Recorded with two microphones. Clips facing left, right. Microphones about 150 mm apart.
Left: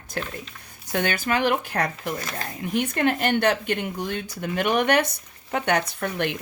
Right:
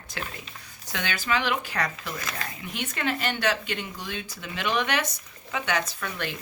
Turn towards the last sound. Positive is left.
turn(degrees=60)  # may be behind; listen again after turning